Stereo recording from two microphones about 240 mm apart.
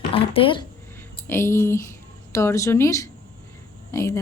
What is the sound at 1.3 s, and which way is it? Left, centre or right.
A woman's voice, centre.